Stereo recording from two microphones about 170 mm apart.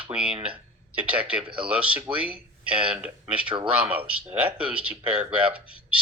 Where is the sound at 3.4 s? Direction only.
30° right (ahead or behind).